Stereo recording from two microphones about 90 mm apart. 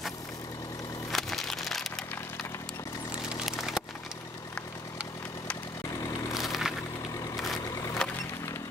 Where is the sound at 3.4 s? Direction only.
5° right (ahead or behind).